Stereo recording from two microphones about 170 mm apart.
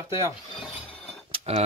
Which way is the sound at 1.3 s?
35° right (ahead or behind).